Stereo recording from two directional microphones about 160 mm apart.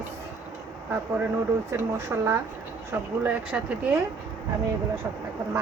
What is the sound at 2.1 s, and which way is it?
Speech, 15° right (ahead or behind).